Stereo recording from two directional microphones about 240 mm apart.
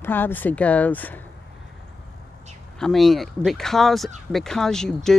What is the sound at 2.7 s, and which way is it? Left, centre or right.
Speech, centre.